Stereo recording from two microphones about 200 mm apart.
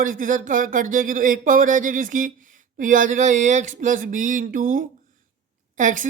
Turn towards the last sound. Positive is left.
turn(degrees=-40)  # may be behind; listen again after turning